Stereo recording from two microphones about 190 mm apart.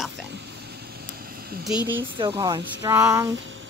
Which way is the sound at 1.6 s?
5° right (ahead or behind).